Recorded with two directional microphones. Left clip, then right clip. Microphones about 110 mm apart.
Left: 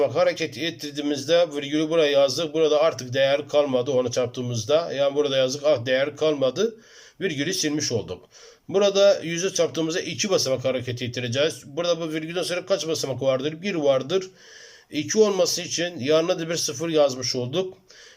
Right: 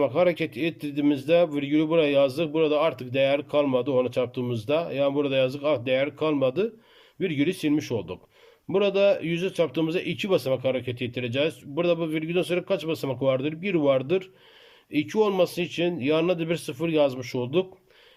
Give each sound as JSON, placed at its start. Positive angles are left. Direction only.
{"t": 0.0, "sound": "a man's voice", "side_deg": -25}